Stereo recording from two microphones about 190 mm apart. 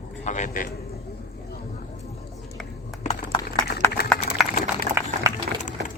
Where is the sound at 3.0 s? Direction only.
35° left (ahead or behind).